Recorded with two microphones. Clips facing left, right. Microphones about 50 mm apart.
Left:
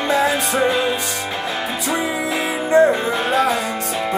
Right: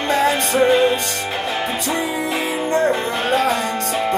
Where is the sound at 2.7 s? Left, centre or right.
Centre.